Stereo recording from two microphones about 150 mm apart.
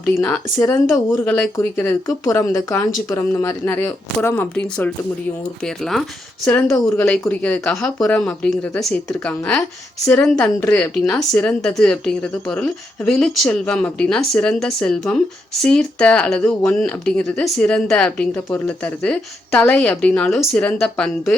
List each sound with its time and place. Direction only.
0.0 s speech: 15° left (ahead or behind)
5.6 s a woman's voice: centre (ahead or behind)